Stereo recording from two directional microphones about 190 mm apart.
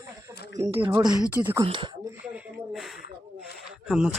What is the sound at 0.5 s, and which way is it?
Speech, 15° right (ahead or behind).